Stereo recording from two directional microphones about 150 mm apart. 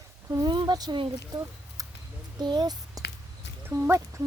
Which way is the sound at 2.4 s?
30° right (ahead or behind).